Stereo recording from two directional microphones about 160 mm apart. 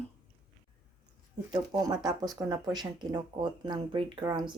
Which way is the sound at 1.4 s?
25° right (ahead or behind).